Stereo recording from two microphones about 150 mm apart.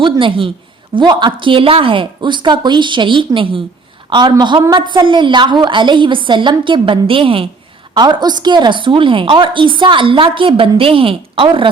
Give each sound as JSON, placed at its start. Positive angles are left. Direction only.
{"t": 0.0, "sound": "a woman's voice", "side_deg": -35}